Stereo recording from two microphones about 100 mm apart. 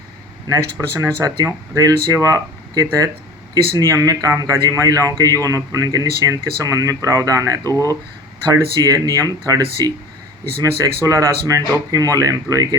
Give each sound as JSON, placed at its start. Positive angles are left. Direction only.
{"t": 0.4, "sound": "speech", "side_deg": -40}